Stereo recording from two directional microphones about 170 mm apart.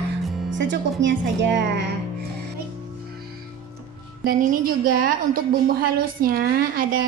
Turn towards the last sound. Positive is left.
turn(degrees=-55)  # may be behind; listen again after turning